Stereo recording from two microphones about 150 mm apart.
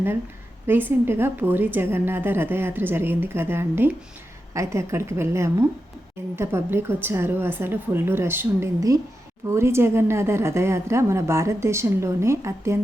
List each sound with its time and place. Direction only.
0.7 s a woman's voice: 15° right (ahead or behind)